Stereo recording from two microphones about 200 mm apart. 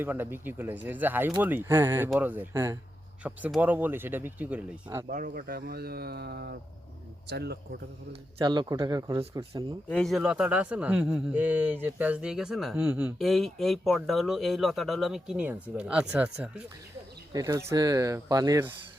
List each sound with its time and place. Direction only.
0.0 s speech: 10° right (ahead or behind)
5.0 s speech: 45° right (ahead or behind)
8.4 s speech: 25° right (ahead or behind)
9.9 s a man's voice: centre (ahead or behind)
17.3 s speech: 15° right (ahead or behind)